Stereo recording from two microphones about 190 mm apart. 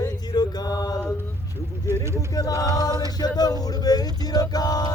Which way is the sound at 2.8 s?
20° left (ahead or behind).